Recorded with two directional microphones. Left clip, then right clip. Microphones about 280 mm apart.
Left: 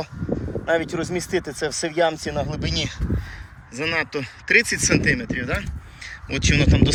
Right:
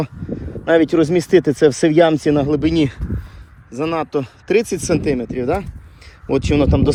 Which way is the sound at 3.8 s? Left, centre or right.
Centre.